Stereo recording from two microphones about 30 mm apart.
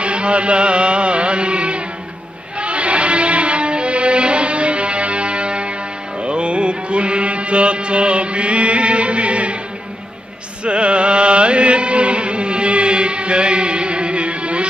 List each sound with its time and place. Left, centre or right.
0.0 s music: right
6.2 s mantra: right
10.6 s music: right